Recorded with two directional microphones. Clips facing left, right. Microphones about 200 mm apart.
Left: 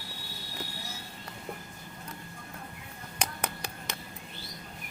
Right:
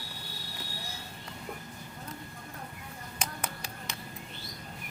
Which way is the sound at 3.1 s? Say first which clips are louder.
Left 3 dB; 65° left (ahead or behind).